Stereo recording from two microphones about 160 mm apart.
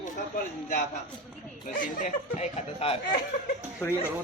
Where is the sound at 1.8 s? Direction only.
50° left (ahead or behind).